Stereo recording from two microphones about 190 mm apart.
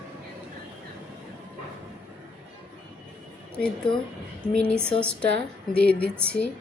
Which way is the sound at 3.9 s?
25° left (ahead or behind).